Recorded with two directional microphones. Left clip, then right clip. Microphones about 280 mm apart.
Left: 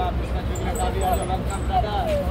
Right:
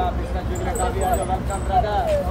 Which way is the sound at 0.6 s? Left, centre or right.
Right.